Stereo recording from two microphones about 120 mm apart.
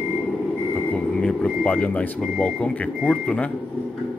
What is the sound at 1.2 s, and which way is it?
Speech, 10° left (ahead or behind).